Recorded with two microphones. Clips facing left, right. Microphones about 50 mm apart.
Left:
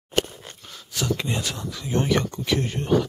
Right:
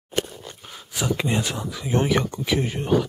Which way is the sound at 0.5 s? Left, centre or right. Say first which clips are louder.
Right 2 dB; centre.